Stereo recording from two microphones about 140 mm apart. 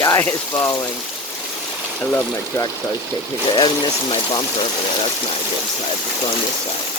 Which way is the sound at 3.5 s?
30° left (ahead or behind).